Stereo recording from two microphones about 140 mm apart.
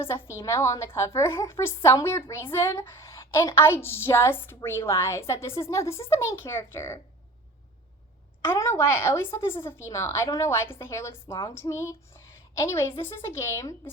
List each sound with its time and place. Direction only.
0.0 s a woman's voice: 20° left (ahead or behind)
8.4 s a woman's voice: 20° left (ahead or behind)